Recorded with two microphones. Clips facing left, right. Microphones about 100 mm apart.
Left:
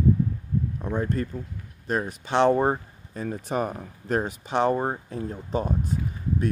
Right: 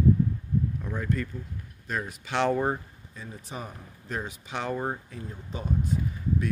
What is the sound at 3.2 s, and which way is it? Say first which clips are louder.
Speech: left 12 dB; 65° left (ahead or behind).